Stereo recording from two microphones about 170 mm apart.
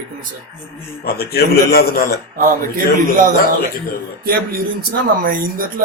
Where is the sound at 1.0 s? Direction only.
65° left (ahead or behind).